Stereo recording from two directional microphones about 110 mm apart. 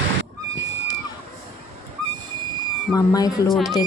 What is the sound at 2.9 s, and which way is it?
Speech, 35° left (ahead or behind).